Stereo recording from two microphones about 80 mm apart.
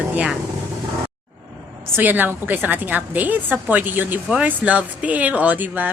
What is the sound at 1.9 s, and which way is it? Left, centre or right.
A woman's voice, right.